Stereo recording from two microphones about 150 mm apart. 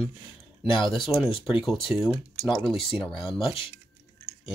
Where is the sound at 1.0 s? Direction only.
5° right (ahead or behind).